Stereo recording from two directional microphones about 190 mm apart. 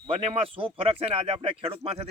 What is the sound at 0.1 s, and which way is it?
Speech, 30° right (ahead or behind).